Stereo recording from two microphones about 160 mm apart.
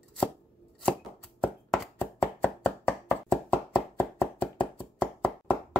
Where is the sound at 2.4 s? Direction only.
10° left (ahead or behind).